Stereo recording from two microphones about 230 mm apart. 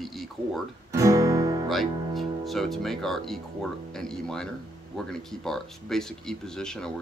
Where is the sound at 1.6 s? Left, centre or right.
Centre.